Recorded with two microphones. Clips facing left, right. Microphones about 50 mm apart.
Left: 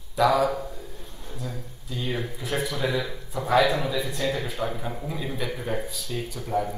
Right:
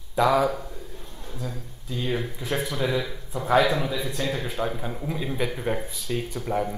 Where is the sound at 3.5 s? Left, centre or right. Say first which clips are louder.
Even; right.